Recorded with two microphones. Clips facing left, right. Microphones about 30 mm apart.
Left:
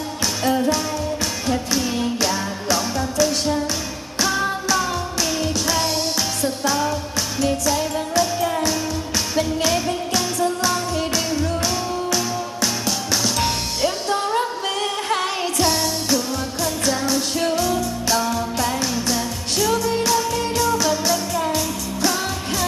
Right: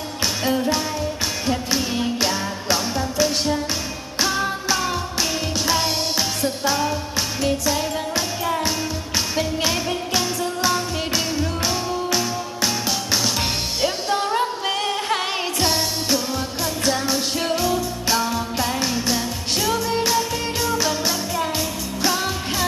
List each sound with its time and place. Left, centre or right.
0.4 s music: centre
1.5 s music: centre
5.6 s music: centre